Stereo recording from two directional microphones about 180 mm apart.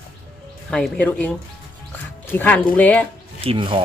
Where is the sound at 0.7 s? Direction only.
5° left (ahead or behind).